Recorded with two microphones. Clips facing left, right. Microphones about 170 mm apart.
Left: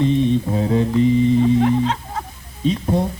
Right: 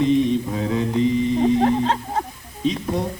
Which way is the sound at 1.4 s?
40° right (ahead or behind).